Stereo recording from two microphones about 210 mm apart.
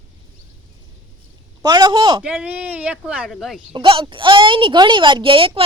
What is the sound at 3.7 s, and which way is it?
Speech, 25° right (ahead or behind).